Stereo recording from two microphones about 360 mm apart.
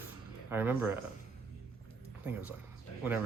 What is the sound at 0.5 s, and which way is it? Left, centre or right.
Speech, centre.